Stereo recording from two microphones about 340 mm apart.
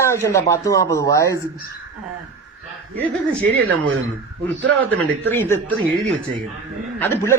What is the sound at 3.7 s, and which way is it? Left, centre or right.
Speech, right.